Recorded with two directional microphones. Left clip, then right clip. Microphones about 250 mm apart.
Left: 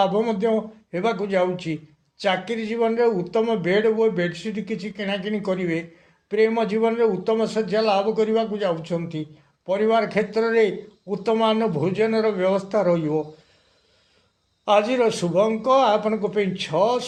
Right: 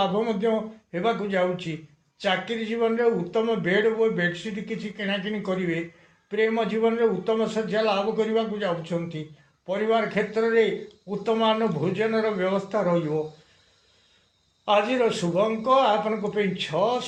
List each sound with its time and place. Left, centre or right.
0.0 s a man's voice: left
14.6 s a man's voice: left